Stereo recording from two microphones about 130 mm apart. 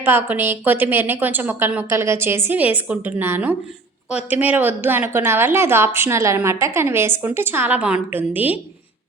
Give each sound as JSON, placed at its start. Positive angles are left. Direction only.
{"t": 0.0, "sound": "a woman's voice", "side_deg": -15}